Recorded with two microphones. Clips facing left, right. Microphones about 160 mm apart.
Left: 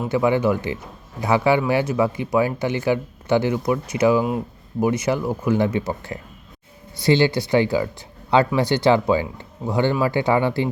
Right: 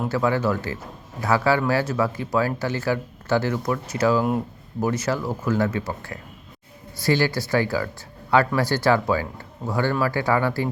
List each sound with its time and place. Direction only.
0.1 s a man's voice: 15° left (ahead or behind)
4.2 s speech: centre (ahead or behind)
4.8 s speech: 15° left (ahead or behind)